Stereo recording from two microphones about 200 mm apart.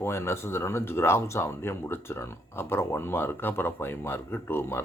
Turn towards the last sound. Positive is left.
turn(degrees=10)  # may be behind; listen again after turning